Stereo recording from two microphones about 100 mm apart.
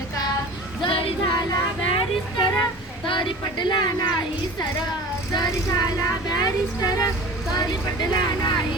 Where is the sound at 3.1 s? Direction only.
55° left (ahead or behind); by 7.1 s 40° left (ahead or behind).